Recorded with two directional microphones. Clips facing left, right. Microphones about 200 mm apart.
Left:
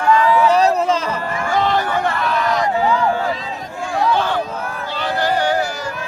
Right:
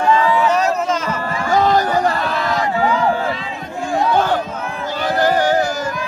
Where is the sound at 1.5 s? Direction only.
40° right (ahead or behind).